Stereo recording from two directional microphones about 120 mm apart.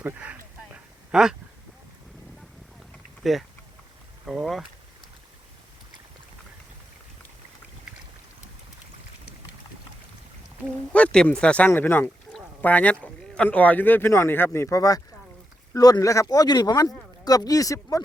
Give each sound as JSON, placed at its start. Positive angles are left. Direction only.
{"t": 0.0, "sound": "a sound", "side_deg": -15}
{"t": 3.2, "sound": "speech", "side_deg": 0}
{"t": 10.9, "sound": "speech", "side_deg": 10}